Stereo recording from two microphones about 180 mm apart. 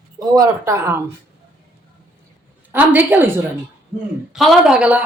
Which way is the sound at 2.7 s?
10° right (ahead or behind).